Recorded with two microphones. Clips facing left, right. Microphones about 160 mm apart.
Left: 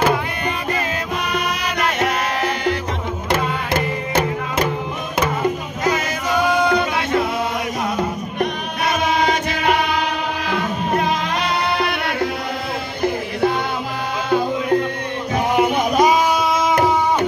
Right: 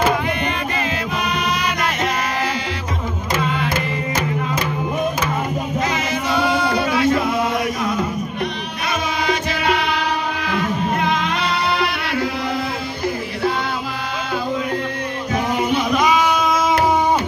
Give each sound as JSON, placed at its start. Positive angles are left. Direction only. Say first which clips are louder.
{"t": 6.3, "sound": "music", "louder": "left 3 dB", "side_deg": 20}
{"t": 15.5, "sound": "music", "louder": "left 3 dB", "side_deg": 45}